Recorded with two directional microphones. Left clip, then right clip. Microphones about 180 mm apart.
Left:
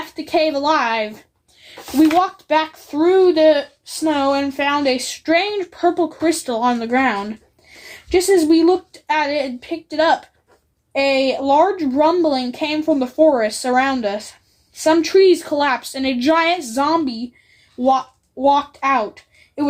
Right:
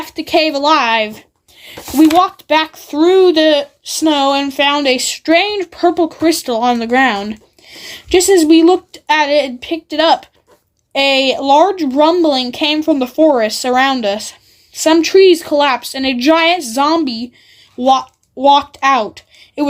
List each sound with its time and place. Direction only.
0.2 s a child's voice: 40° right (ahead or behind)